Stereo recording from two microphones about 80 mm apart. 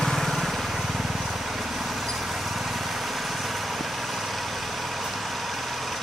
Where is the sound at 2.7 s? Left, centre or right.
Centre.